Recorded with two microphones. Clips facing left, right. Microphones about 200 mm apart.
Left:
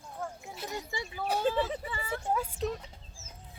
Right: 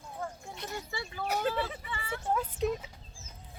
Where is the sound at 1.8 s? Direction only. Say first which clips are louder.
Left 2 dB; 40° left (ahead or behind).